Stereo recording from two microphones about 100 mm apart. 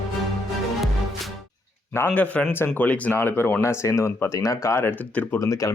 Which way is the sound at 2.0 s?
15° left (ahead or behind).